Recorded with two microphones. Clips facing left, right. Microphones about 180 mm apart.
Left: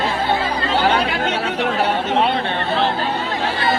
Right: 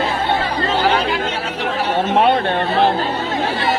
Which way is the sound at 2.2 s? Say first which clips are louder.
Right 4 dB; 55° right (ahead or behind).